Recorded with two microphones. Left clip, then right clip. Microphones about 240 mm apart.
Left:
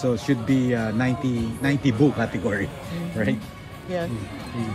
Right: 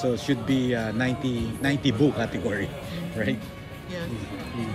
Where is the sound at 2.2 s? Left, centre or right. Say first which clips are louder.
Left 2 dB; centre.